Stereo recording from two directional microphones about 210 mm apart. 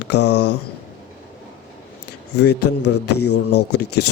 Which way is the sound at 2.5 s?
90° left.